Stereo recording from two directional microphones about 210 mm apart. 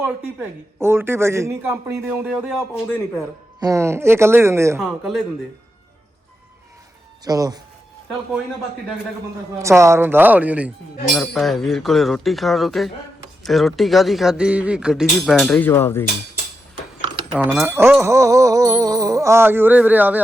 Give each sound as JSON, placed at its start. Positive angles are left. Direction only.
{"t": 0.8, "sound": "speech", "side_deg": -10}
{"t": 2.3, "sound": "speech", "side_deg": 0}
{"t": 3.6, "sound": "speech", "side_deg": -15}
{"t": 4.8, "sound": "speech", "side_deg": 0}
{"t": 7.3, "sound": "speech", "side_deg": -20}
{"t": 9.6, "sound": "speech", "side_deg": -15}
{"t": 15.4, "sound": "speech", "side_deg": 10}
{"t": 17.3, "sound": "speech", "side_deg": -5}
{"t": 18.0, "sound": "a sound", "side_deg": -15}